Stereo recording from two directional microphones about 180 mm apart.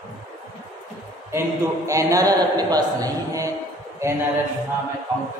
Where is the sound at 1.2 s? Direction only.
15° right (ahead or behind).